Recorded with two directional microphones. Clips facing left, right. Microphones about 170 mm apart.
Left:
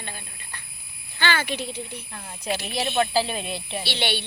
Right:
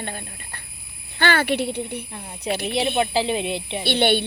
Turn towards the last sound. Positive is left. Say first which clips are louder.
# right 9 dB
turn(degrees=-55)  # may be behind; listen again after turning